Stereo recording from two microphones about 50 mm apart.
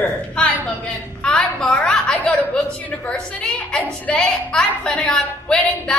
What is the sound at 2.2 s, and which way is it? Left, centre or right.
A woman's voice, left.